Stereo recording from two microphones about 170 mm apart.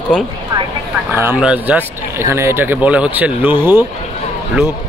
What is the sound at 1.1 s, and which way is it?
Speech, 10° right (ahead or behind).